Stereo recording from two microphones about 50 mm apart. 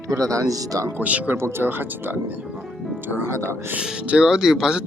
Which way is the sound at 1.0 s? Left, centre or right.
Right.